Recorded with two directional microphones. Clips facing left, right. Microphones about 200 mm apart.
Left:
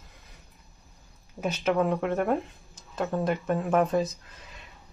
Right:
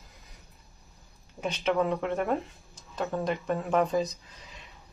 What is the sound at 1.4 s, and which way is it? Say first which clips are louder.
Speech: left 2 dB; 5° left (ahead or behind).